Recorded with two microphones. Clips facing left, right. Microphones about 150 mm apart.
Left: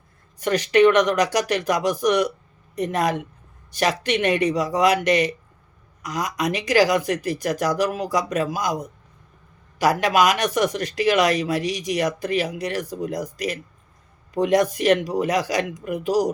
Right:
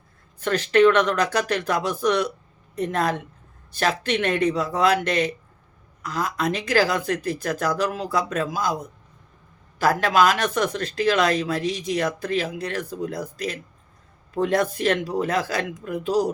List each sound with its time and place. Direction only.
0.3 s speech: 10° left (ahead or behind)
9.8 s speech: 15° left (ahead or behind)